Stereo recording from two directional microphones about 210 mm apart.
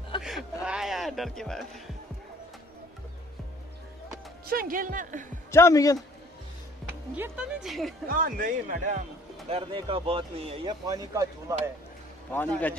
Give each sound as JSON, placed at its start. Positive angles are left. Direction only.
{"t": 0.2, "sound": "speech", "side_deg": 0}
{"t": 4.5, "sound": "a man's voice", "side_deg": -45}
{"t": 5.5, "sound": "a man's voice", "side_deg": 15}
{"t": 6.9, "sound": "speech", "side_deg": -5}
{"t": 8.1, "sound": "a man's voice", "side_deg": -45}
{"t": 9.5, "sound": "speech", "side_deg": -25}
{"t": 12.3, "sound": "a man's voice", "side_deg": 5}